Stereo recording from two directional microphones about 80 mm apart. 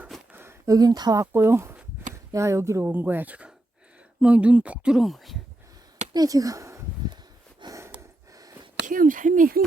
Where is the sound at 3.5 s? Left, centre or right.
Centre.